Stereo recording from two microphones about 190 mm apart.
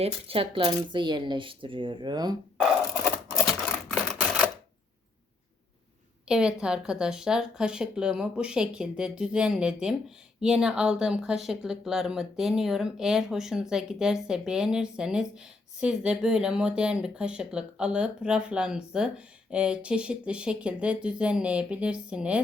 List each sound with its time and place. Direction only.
0.0 s speech: 30° right (ahead or behind)
3.8 s camera: centre (ahead or behind)
6.2 s speech: 5° right (ahead or behind)